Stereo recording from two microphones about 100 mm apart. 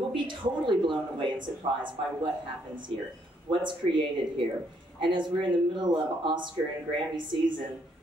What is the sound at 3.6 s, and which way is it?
Speech, 55° right (ahead or behind).